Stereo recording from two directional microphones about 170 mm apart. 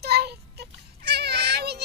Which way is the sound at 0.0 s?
70° right (ahead or behind).